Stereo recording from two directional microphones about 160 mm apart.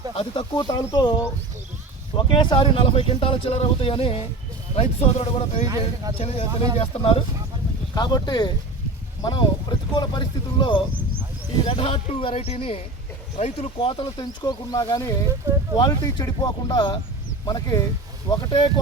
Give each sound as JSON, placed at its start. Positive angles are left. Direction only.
{"t": 0.2, "sound": "speech", "side_deg": 30}
{"t": 5.6, "sound": "speech", "side_deg": -25}
{"t": 6.1, "sound": "speech", "side_deg": 40}